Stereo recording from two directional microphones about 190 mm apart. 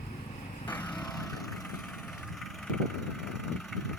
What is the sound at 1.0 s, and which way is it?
Vehicle, 20° left (ahead or behind).